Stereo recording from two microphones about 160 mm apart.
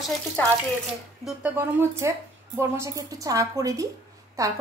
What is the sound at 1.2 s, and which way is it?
A woman's voice, 10° right (ahead or behind).